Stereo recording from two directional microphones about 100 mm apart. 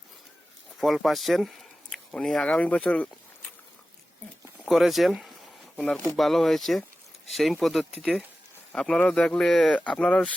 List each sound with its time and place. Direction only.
0.8 s speech: centre (ahead or behind)
4.6 s a man's voice: centre (ahead or behind)